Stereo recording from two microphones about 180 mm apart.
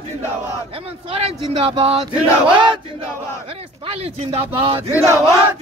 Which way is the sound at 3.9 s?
30° right (ahead or behind).